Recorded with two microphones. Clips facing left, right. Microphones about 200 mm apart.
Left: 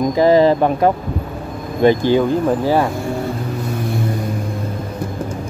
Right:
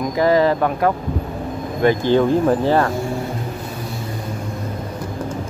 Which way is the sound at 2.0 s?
5° left (ahead or behind).